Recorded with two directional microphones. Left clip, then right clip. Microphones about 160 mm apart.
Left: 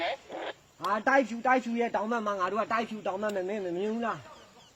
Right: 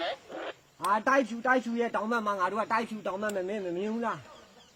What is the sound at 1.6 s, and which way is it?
A man's voice, 35° right (ahead or behind).